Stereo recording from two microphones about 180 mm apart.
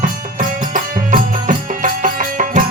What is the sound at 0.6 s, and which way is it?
Music, 45° right (ahead or behind).